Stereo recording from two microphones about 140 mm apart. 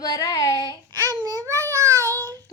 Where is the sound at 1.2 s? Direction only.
25° right (ahead or behind).